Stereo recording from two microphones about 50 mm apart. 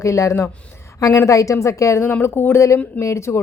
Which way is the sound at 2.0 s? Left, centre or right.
Left.